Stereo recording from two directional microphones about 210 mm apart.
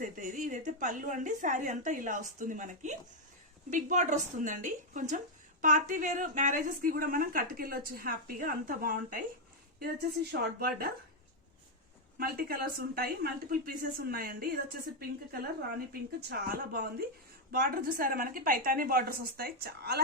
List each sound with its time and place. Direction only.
0.0 s a woman's voice: 40° right (ahead or behind)
10.6 s a woman's voice: 45° right (ahead or behind)
12.1 s a woman's voice: 45° right (ahead or behind)